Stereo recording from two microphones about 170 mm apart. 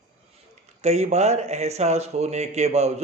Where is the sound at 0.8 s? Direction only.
40° right (ahead or behind).